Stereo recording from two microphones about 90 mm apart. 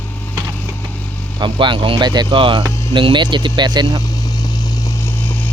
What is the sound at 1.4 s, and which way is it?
Speech, 60° right (ahead or behind).